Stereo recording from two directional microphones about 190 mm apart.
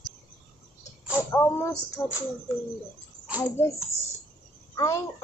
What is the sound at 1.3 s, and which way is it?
Speech, 15° left (ahead or behind).